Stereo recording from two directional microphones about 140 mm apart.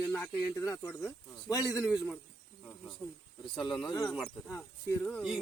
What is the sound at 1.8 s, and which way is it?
Speech, centre (ahead or behind).